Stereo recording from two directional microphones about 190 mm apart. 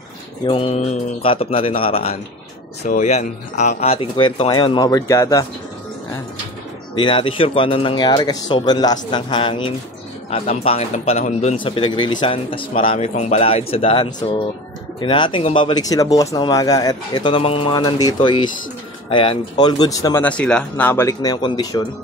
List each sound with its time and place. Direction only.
0.5 s speech: 30° left (ahead or behind)
7.0 s speech: 25° left (ahead or behind)
11.6 s speech: 25° left (ahead or behind)
20.2 s speech: 5° left (ahead or behind); by 21.8 s 20° left (ahead or behind)